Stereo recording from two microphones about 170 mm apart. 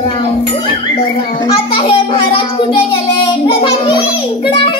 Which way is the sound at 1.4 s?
30° left (ahead or behind).